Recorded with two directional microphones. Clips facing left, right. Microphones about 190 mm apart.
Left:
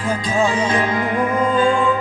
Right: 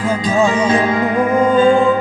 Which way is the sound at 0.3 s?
25° right (ahead or behind).